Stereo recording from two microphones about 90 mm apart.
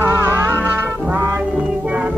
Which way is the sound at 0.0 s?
25° right (ahead or behind).